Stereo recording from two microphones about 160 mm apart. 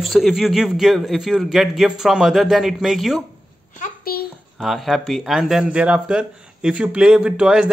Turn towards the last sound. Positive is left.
turn(degrees=-5)  # may be behind; listen again after turning